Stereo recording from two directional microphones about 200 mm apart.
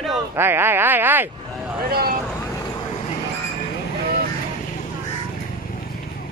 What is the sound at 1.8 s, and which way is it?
Speech, 50° right (ahead or behind).